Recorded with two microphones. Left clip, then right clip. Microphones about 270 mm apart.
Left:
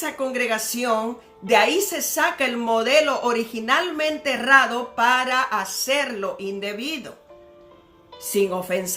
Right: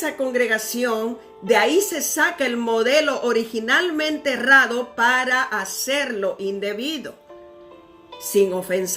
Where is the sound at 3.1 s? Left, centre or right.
Left.